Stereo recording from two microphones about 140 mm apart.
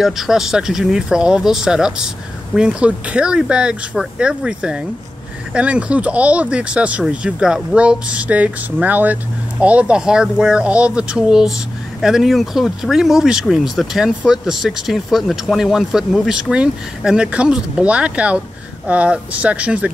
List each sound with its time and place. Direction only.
0.0 s speech: 5° right (ahead or behind)